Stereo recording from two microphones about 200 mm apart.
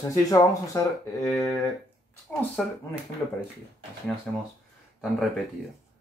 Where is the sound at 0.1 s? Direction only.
15° left (ahead or behind).